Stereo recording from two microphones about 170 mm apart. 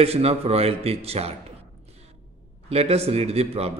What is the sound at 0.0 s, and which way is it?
A man's voice, 35° right (ahead or behind).